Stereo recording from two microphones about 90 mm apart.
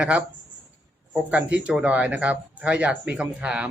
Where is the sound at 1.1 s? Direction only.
15° right (ahead or behind).